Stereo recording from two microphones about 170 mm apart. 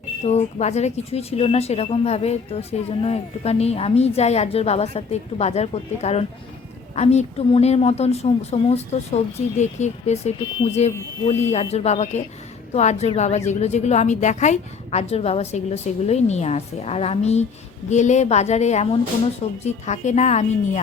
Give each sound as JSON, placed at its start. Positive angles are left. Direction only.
{"t": 0.3, "sound": "speech", "side_deg": 40}